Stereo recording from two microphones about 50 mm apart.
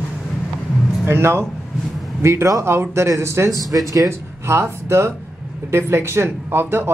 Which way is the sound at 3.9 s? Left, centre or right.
Right.